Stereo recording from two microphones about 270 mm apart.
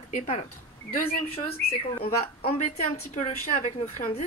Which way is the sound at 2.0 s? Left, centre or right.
Left.